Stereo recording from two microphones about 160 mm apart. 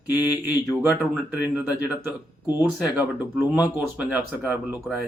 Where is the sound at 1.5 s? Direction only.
10° right (ahead or behind).